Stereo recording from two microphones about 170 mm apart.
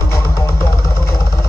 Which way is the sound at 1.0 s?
20° left (ahead or behind).